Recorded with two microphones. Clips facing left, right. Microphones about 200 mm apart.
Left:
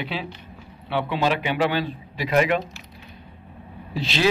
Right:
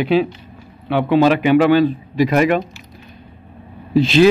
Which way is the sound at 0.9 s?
50° right (ahead or behind).